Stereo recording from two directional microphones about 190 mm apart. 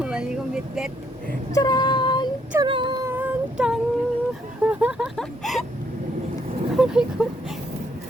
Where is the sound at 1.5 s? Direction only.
20° left (ahead or behind).